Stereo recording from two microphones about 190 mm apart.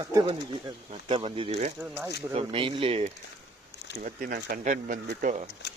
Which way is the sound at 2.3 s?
30° right (ahead or behind).